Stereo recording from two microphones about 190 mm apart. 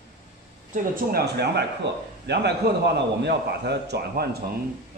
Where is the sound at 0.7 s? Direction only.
55° right (ahead or behind).